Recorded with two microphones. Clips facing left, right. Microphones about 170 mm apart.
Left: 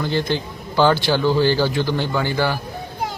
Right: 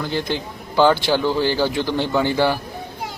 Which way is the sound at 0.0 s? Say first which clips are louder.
Left 2 dB; 10° right (ahead or behind).